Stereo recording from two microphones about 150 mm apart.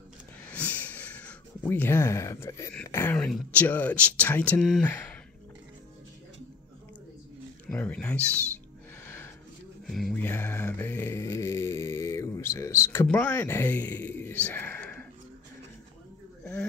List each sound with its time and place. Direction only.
0.5 s a sound: 10° left (ahead or behind)
3.3 s speech: 5° left (ahead or behind)
7.7 s speech: 10° left (ahead or behind)
9.0 s a sound: 15° left (ahead or behind)
9.8 s speech: centre (ahead or behind)
10.1 s mantra: 15° left (ahead or behind)